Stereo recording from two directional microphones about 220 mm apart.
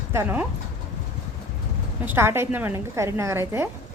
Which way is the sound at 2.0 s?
10° right (ahead or behind).